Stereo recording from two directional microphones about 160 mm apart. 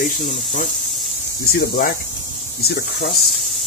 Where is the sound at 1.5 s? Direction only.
70° left (ahead or behind).